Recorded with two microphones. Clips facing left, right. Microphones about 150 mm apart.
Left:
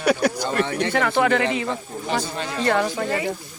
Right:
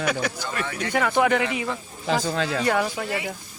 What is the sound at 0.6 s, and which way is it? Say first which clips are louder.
Speech: left 6 dB; 30° left (ahead or behind).